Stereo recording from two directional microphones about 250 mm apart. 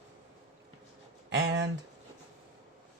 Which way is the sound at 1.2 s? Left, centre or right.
Right.